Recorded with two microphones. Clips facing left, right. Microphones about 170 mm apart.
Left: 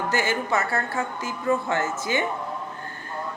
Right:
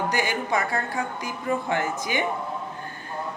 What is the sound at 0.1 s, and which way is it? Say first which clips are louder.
A woman's voice: left 1 dB; 15° right (ahead or behind).